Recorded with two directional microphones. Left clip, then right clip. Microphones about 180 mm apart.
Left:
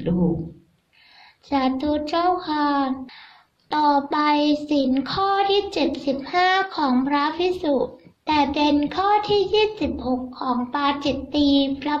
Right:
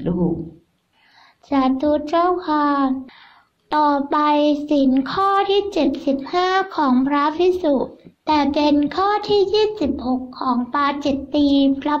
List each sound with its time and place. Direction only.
1.5 s a woman's voice: 35° right (ahead or behind)